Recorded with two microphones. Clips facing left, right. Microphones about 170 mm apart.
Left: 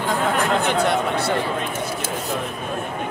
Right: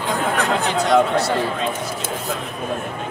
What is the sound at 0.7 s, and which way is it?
Speech, 60° left (ahead or behind).